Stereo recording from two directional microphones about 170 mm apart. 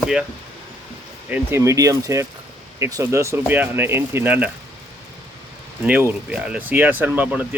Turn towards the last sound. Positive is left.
turn(degrees=-10)  # may be behind; listen again after turning